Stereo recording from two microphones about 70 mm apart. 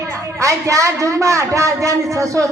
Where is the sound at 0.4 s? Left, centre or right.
Right.